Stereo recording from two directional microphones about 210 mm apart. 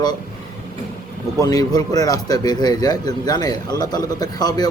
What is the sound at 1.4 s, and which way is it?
A man's voice, 15° left (ahead or behind).